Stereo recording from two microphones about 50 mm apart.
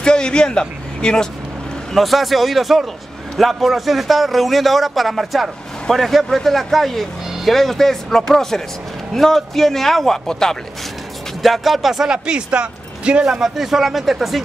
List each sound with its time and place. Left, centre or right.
0.0 s a man's voice: centre
2.0 s speech: centre
11.4 s speech: centre
12.1 s speech: centre
13.3 s speech: centre